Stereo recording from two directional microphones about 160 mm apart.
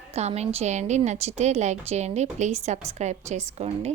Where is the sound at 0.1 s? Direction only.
40° right (ahead or behind).